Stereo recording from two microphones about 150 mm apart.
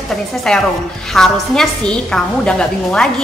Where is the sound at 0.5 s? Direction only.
5° left (ahead or behind).